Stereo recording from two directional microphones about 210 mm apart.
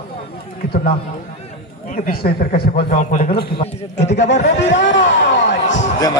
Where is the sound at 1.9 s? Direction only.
45° left (ahead or behind).